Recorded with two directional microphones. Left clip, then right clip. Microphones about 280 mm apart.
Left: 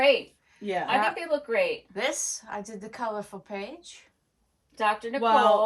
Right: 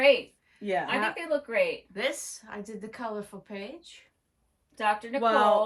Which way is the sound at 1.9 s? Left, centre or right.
Left.